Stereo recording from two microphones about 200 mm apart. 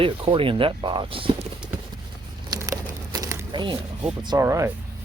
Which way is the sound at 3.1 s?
15° right (ahead or behind).